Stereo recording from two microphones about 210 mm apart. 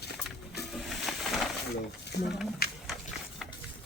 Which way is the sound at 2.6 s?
45° left (ahead or behind).